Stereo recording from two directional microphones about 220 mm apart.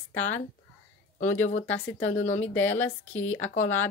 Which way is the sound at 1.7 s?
60° left (ahead or behind).